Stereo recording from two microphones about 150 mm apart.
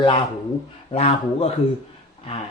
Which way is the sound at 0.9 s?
40° left (ahead or behind).